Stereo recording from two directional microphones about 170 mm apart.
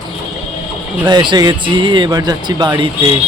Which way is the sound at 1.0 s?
25° right (ahead or behind).